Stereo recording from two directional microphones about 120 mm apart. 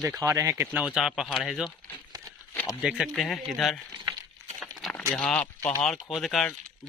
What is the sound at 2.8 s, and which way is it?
Speech, 5° right (ahead or behind).